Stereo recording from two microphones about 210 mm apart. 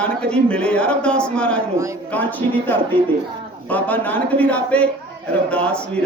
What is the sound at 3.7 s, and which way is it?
Speech, 10° left (ahead or behind).